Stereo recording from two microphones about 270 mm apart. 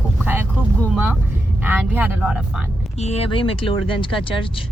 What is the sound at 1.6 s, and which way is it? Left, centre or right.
Speech, centre.